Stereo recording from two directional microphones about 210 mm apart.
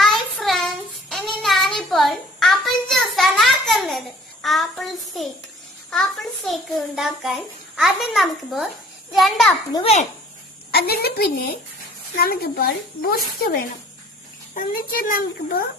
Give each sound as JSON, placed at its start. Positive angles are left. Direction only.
{"t": 0.0, "sound": "child singing", "side_deg": 0}
{"t": 5.9, "sound": "a child's voice", "side_deg": 0}
{"t": 9.7, "sound": "a child's voice", "side_deg": 30}
{"t": 10.7, "sound": "speech", "side_deg": 45}
{"t": 14.5, "sound": "speech", "side_deg": 40}